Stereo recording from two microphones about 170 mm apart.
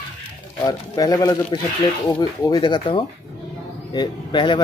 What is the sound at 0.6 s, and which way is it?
Speech, 20° left (ahead or behind).